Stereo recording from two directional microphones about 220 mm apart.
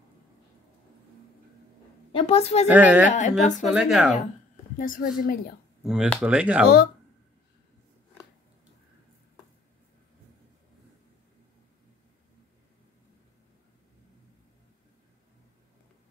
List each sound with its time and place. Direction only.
2.1 s a woman's voice: 25° left (ahead or behind)
2.7 s speech: 5° right (ahead or behind)
3.1 s a woman's voice: 35° left (ahead or behind)
3.6 s speech: centre (ahead or behind)
4.7 s a woman's voice: 40° left (ahead or behind)
5.9 s speech: centre (ahead or behind)